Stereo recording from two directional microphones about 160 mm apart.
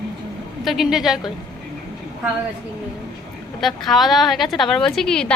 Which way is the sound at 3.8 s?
Centre (ahead or behind).